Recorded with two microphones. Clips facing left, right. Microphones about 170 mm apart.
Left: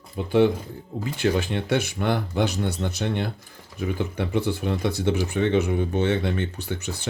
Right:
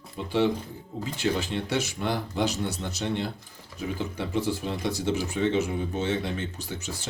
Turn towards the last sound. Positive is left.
turn(degrees=65)  # may be behind; listen again after turning